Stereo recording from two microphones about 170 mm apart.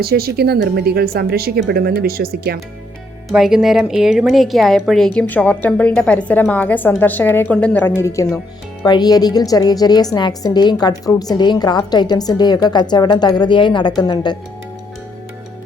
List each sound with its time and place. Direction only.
0.0 s speech: 65° right (ahead or behind)
3.3 s a woman's voice: 5° right (ahead or behind); by 14.3 s 25° left (ahead or behind)